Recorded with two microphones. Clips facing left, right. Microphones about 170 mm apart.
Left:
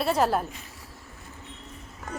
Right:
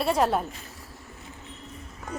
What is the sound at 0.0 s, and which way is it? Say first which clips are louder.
Speech: even; centre (ahead or behind).